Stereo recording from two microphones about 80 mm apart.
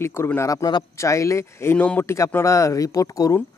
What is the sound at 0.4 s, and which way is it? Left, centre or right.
Speech, left.